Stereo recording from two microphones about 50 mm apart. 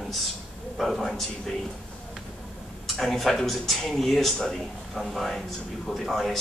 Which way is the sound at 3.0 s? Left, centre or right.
Centre.